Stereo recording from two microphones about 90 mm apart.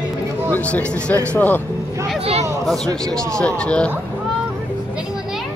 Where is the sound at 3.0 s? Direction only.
5° left (ahead or behind).